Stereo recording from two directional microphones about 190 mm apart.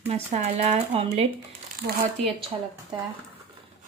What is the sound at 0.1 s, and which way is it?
Speech, 35° right (ahead or behind).